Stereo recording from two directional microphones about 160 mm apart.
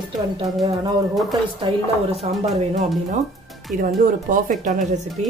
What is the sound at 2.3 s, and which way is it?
Speech, 40° right (ahead or behind).